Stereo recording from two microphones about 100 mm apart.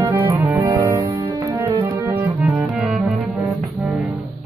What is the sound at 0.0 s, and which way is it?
Music, 20° right (ahead or behind).